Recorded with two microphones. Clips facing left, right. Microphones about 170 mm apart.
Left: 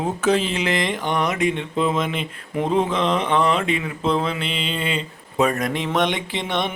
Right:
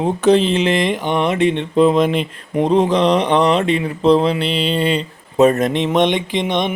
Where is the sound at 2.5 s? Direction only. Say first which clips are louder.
Right 6 dB; 35° right (ahead or behind); by 6.7 s 20° right (ahead or behind).